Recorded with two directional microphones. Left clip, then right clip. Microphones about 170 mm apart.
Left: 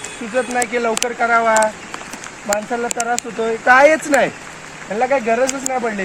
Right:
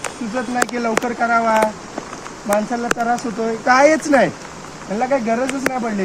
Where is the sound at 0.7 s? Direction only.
30° left (ahead or behind).